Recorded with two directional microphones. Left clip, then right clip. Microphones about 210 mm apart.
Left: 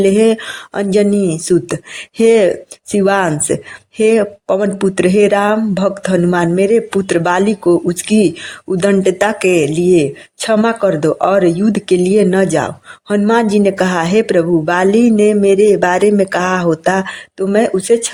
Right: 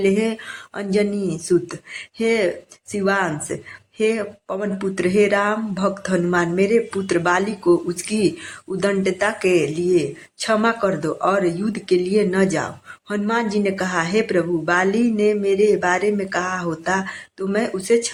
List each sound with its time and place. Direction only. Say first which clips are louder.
0.0 s speech: left 9 dB; 40° left (ahead or behind)